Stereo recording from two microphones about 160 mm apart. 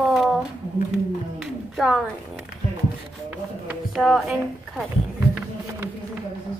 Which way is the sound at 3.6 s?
Centre (ahead or behind).